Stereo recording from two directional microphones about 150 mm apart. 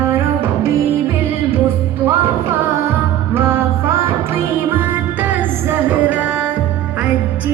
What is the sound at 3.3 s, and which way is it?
Music, 15° right (ahead or behind).